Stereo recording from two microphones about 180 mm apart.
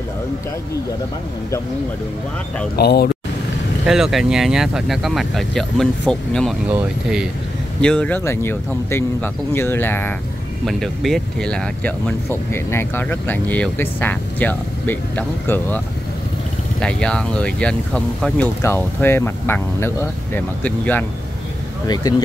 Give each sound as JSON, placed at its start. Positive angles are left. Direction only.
{"t": 2.7, "sound": "speech", "side_deg": 65}
{"t": 3.8, "sound": "speech", "side_deg": 0}
{"t": 16.8, "sound": "speech", "side_deg": 5}
{"t": 21.8, "sound": "speech", "side_deg": 20}